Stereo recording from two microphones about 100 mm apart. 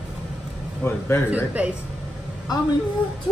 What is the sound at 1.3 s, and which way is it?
Speech, 15° right (ahead or behind).